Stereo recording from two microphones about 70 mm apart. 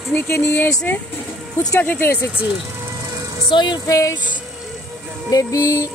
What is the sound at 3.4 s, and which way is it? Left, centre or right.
Music, left.